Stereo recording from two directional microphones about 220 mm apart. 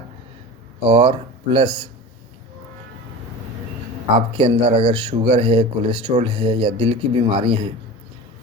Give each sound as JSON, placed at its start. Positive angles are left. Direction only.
{"t": 0.9, "sound": "speech", "side_deg": -20}
{"t": 4.4, "sound": "speech", "side_deg": -25}